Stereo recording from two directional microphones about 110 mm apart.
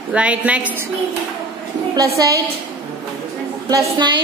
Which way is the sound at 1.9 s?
30° right (ahead or behind).